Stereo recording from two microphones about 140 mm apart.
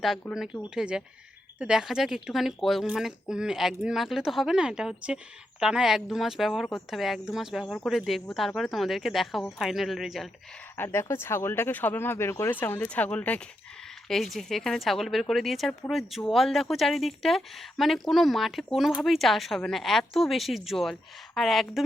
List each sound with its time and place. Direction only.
0.0 s speech: centre (ahead or behind)
10.8 s speech: 20° left (ahead or behind); by 21.8 s centre (ahead or behind)